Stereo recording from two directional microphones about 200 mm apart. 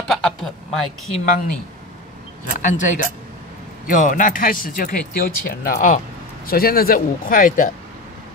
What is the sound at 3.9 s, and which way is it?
Speech, 40° left (ahead or behind).